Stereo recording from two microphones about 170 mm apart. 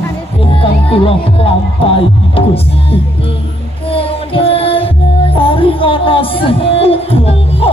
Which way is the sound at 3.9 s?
35° left (ahead or behind).